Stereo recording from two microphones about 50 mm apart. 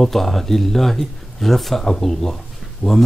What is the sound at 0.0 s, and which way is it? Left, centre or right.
Speech, centre.